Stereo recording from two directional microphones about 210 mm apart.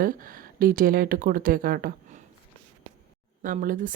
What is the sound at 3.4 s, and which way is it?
Speech, 40° right (ahead or behind).